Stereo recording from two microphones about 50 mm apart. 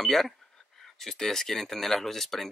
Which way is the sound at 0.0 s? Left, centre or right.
Centre.